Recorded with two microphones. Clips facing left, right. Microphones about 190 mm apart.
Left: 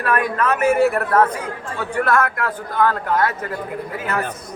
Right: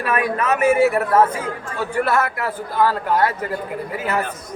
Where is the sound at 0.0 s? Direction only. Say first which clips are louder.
Left 1 dB; 10° right (ahead or behind).